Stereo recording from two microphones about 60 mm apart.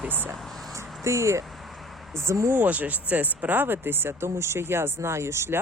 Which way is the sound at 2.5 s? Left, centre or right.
Right.